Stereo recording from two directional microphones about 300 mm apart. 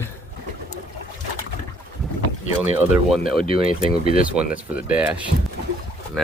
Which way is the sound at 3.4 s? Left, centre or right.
Centre.